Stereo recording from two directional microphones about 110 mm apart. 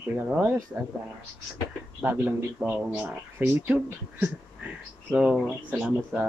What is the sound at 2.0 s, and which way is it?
Speech, 20° right (ahead or behind).